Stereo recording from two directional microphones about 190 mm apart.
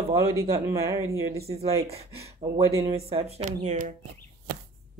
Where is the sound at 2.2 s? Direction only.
15° right (ahead or behind).